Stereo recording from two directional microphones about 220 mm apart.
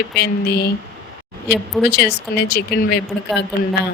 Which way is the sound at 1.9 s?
45° left (ahead or behind).